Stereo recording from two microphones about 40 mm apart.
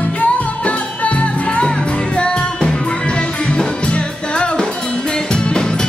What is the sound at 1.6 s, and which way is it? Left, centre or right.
Music, left.